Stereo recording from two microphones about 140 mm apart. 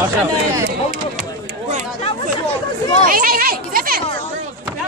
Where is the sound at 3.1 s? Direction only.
90° right.